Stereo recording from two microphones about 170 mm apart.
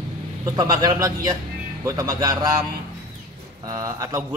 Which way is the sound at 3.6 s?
20° right (ahead or behind).